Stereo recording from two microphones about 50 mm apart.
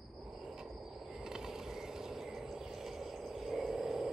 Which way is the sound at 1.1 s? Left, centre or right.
Centre.